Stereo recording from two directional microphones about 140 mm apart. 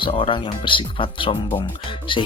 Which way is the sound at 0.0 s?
40° left (ahead or behind).